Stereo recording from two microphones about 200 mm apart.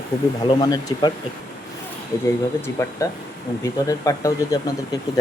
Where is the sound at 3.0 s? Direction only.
15° left (ahead or behind).